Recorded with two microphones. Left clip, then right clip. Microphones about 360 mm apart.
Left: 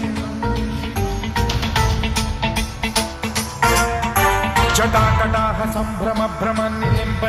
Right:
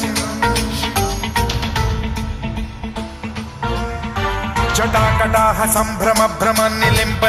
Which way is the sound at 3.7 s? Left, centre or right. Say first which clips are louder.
Left 5 dB; left.